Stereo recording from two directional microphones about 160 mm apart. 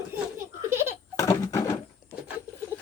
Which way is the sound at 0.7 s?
15° right (ahead or behind).